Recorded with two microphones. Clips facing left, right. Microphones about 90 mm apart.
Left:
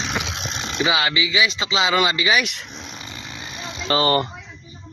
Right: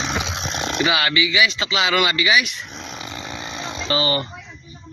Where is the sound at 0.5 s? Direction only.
55° right (ahead or behind).